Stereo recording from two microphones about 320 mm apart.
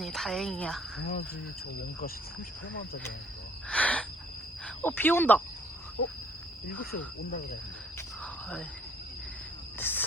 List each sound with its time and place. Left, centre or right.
0.0 s speech: centre
1.0 s cricket: left
3.7 s owl: centre
4.6 s speech: centre
7.9 s cricket: centre
9.7 s cricket: centre